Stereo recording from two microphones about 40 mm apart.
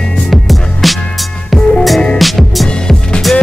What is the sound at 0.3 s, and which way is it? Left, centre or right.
Music, centre.